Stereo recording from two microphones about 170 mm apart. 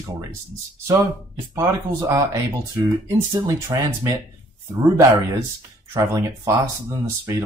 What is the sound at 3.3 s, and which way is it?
Speech, 25° right (ahead or behind).